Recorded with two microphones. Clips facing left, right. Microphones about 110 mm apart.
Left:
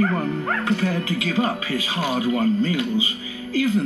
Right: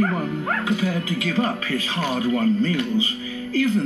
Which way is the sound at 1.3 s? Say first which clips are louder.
Even; 10° left (ahead or behind).